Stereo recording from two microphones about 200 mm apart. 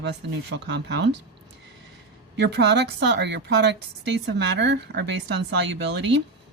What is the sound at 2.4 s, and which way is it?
Speech, 55° right (ahead or behind).